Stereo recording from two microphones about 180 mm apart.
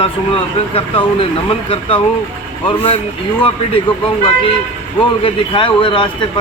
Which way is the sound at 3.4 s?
30° left (ahead or behind).